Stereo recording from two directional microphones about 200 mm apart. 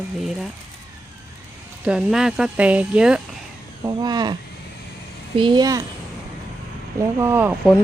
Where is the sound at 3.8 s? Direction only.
20° right (ahead or behind).